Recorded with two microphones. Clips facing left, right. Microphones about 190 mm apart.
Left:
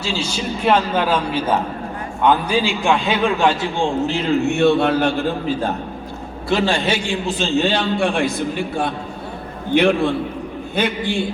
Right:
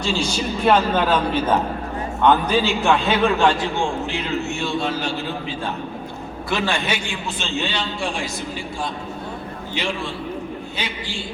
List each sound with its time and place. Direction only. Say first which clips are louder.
0.0 s a man's voice: right 1 dB; 10° left (ahead or behind)
4.4 s a man's voice: left 9 dB; 60° left (ahead or behind)
6.5 s a man's voice: left 5 dB; 30° left (ahead or behind)
7.6 s a man's voice: left 7 dB; 55° left (ahead or behind)